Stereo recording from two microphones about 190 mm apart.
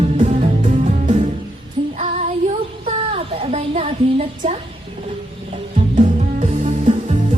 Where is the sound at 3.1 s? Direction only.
35° right (ahead or behind).